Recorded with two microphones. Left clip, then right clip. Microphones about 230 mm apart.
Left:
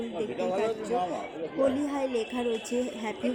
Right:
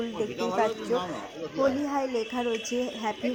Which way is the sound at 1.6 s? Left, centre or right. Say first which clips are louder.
Right 1 dB; centre.